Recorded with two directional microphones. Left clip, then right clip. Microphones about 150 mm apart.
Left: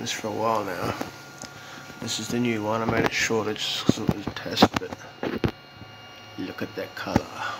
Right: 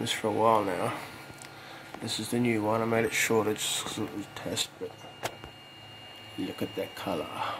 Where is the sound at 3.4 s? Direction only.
20° right (ahead or behind).